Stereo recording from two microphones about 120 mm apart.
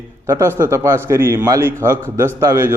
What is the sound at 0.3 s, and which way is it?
Speech, 20° right (ahead or behind).